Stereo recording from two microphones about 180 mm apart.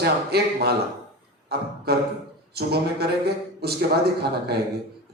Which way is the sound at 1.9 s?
60° right (ahead or behind).